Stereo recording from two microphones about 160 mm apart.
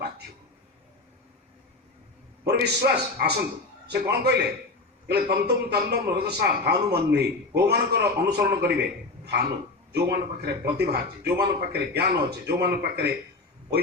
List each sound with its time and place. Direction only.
2.5 s a man's voice: 90° right